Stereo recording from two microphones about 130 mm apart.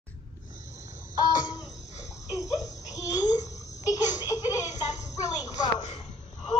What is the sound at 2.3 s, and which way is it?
Babbling, 25° left (ahead or behind).